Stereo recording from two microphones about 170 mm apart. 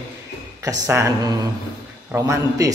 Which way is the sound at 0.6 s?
20° right (ahead or behind).